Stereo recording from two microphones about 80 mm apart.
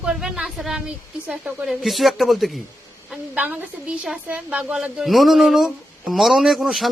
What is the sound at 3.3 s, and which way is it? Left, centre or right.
A woman's voice, right.